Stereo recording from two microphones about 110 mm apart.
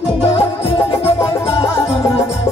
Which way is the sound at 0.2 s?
60° left (ahead or behind).